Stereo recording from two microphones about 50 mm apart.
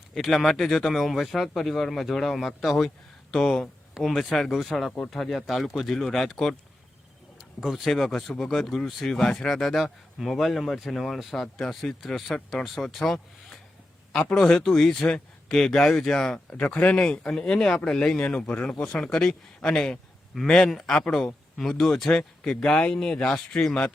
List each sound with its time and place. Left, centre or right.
0.2 s speech: centre
7.6 s speech: centre
16.6 s speech: left
18.2 s speech: left; by 20.9 s centre
20.9 s speech: centre
21.6 s speech: centre